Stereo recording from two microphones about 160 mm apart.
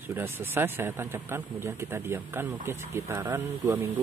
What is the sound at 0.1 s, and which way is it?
A man's voice, 15° right (ahead or behind).